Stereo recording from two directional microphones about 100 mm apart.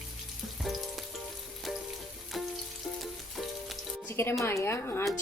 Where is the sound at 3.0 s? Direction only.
Centre (ahead or behind).